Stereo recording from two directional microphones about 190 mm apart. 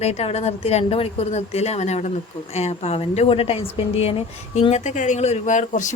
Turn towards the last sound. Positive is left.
turn(degrees=40)  # may be behind; listen again after turning